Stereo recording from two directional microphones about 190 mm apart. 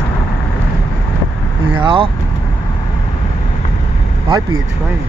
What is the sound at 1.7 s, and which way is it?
Speech, 25° right (ahead or behind).